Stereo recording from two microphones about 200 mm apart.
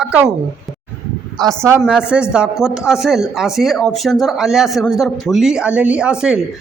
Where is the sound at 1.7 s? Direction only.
10° right (ahead or behind).